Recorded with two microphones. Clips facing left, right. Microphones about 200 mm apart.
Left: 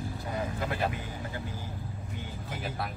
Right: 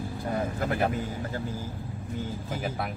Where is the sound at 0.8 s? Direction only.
45° right (ahead or behind).